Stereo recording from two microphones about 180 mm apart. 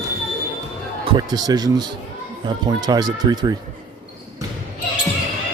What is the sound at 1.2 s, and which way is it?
Speech, 20° right (ahead or behind).